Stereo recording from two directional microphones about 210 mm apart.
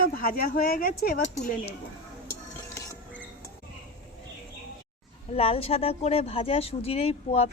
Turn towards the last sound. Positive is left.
turn(degrees=30)  # may be behind; listen again after turning